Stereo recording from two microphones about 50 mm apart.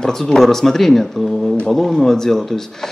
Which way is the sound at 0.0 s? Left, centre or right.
Centre.